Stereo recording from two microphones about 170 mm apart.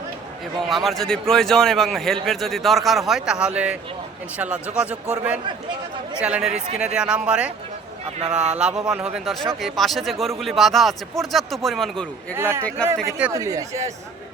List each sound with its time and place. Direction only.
0.7 s a man's voice: centre (ahead or behind)
12.4 s a man's voice: 15° right (ahead or behind)
13.3 s speech: 20° right (ahead or behind)